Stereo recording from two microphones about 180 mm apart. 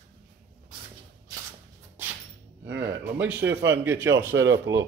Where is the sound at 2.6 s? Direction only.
70° right (ahead or behind).